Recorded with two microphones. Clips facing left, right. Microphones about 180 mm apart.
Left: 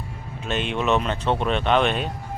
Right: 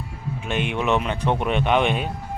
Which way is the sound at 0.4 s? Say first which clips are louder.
Even; 15° right (ahead or behind).